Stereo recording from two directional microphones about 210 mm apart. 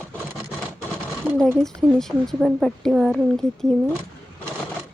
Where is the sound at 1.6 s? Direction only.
Centre (ahead or behind).